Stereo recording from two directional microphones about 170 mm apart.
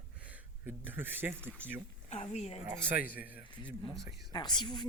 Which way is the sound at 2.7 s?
10° right (ahead or behind).